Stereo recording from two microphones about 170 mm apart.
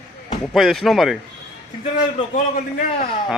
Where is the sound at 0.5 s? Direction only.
Centre (ahead or behind).